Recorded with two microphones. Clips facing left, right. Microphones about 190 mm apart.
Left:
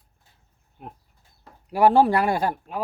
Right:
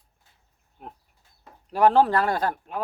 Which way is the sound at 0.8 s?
Centre (ahead or behind).